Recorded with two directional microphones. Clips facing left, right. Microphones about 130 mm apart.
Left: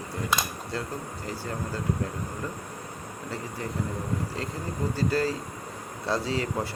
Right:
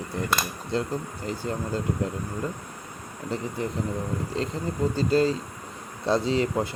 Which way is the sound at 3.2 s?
20° right (ahead or behind).